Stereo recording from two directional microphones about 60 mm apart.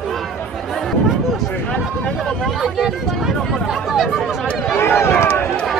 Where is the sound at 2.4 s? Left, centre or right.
Centre.